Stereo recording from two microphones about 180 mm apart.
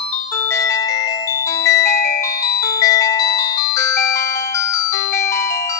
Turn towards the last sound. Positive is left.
turn(degrees=15)  # may be behind; listen again after turning